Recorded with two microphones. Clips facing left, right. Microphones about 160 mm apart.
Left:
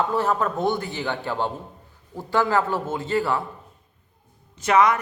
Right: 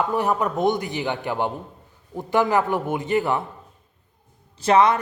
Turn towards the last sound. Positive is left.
turn(degrees=-30)  # may be behind; listen again after turning